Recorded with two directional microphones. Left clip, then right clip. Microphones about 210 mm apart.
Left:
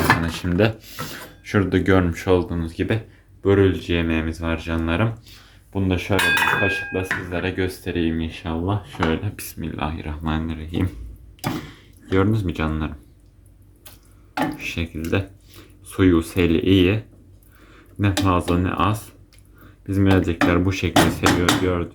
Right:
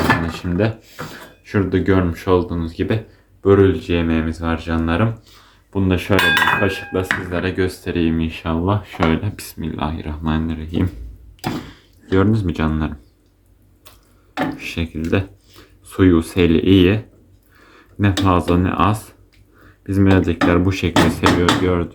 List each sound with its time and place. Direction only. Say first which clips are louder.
0.3 s speech: even; 30° left (ahead or behind); by 5.5 s 15° left (ahead or behind)
5.7 s speech: right 4 dB; centre (ahead or behind)
14.6 s speech: right 2 dB; centre (ahead or behind)